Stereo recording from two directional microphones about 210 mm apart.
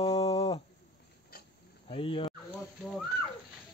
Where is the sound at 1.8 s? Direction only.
25° left (ahead or behind).